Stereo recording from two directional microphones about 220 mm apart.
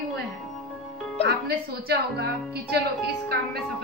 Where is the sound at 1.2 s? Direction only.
45° right (ahead or behind).